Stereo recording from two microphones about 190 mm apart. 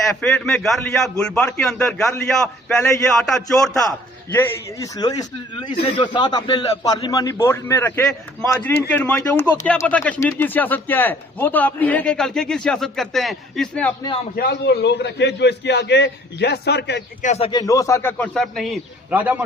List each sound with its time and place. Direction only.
0.2 s a man's voice: 5° left (ahead or behind)
4.4 s a man's voice: 15° left (ahead or behind)
14.3 s a man's voice: 60° left (ahead or behind)
17.2 s a man's voice: 35° left (ahead or behind)
17.5 s a man's voice: 20° left (ahead or behind); by 19.4 s 10° right (ahead or behind)